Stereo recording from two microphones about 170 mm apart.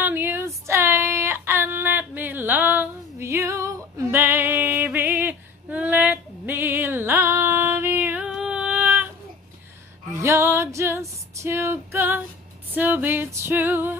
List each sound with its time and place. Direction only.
0.0 s a sound: 10° right (ahead or behind)
0.7 s female singing: 15° right (ahead or behind)
10.1 s female singing: 15° right (ahead or behind)
12.7 s music: 10° right (ahead or behind)